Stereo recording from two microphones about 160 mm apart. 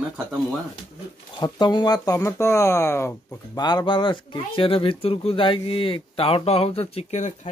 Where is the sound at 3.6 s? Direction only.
25° left (ahead or behind); by 7.5 s 45° left (ahead or behind).